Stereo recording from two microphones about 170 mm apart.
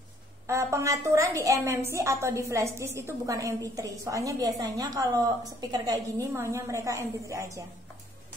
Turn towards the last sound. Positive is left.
turn(degrees=-20)  # may be behind; listen again after turning